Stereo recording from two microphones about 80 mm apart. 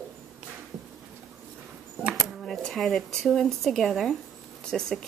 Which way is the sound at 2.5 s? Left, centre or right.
Centre.